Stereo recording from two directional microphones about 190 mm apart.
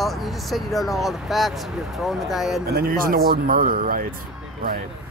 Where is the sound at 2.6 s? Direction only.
55° right (ahead or behind).